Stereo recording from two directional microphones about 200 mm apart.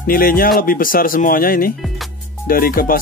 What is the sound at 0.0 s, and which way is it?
Speech, 45° left (ahead or behind).